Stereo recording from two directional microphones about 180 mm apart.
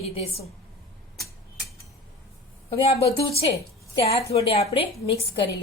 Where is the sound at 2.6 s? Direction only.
35° left (ahead or behind).